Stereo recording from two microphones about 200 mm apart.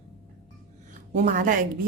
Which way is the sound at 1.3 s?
45° right (ahead or behind).